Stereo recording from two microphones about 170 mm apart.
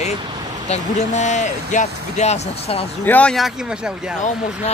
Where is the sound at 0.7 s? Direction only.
40° left (ahead or behind).